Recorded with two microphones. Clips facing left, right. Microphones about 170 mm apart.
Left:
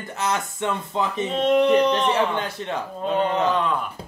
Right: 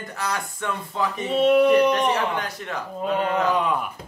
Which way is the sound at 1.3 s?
10° right (ahead or behind).